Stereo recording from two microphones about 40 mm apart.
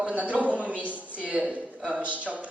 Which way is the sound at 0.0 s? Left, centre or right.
Right.